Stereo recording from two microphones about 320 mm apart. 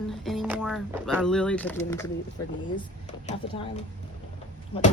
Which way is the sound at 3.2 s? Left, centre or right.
Left.